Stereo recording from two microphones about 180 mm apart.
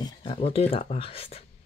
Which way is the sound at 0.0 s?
30° left (ahead or behind).